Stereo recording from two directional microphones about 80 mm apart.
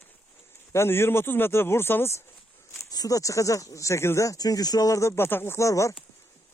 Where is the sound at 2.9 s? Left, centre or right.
Left.